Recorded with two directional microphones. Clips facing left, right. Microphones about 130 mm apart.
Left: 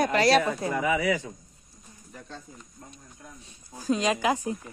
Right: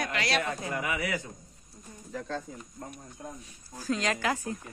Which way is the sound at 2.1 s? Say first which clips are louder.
Right 8 dB; 90° right.